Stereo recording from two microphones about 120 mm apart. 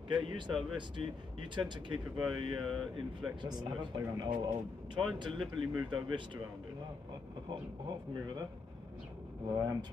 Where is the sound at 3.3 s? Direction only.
40° right (ahead or behind).